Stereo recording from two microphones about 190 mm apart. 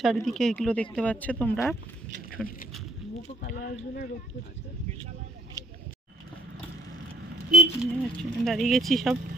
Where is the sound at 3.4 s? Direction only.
45° left (ahead or behind).